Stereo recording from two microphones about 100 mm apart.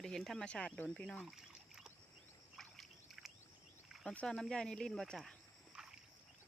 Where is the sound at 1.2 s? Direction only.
5° right (ahead or behind).